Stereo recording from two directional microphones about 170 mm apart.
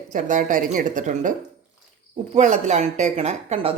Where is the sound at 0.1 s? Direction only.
50° right (ahead or behind).